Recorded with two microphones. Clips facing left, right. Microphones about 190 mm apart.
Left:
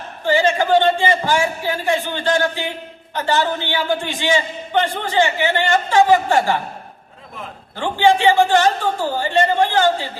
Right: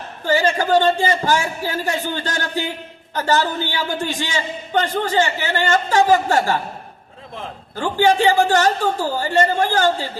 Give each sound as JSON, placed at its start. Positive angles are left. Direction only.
{"t": 0.3, "sound": "a man's voice", "side_deg": -40}
{"t": 7.8, "sound": "a man's voice", "side_deg": -40}